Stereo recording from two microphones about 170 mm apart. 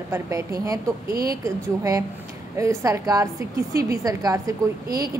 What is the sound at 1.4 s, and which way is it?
A woman's voice, 20° right (ahead or behind).